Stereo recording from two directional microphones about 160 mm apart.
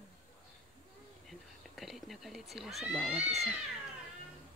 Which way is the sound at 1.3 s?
Centre (ahead or behind).